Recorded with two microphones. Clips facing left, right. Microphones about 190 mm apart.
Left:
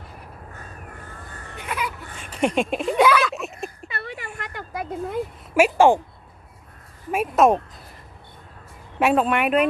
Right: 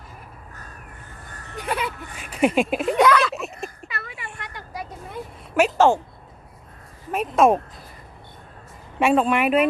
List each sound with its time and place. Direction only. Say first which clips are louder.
1.5 s speech: right 3 dB; 30° right (ahead or behind)
2.1 s speech: right 2 dB; 5° right (ahead or behind)
3.9 s a sound: left 3 dB; 35° left (ahead or behind)
4.4 s a sound: left 2 dB; 50° left (ahead or behind)
5.5 s a woman's voice: left 2 dB; 10° left (ahead or behind)
7.1 s speech: even; 5° left (ahead or behind)
9.0 s speech: right 1 dB; centre (ahead or behind)